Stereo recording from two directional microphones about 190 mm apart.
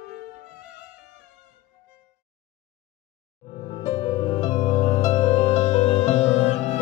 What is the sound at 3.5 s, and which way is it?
Music, 30° left (ahead or behind).